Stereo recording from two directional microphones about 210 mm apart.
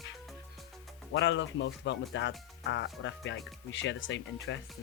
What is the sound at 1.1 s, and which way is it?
Speech, 60° left (ahead or behind).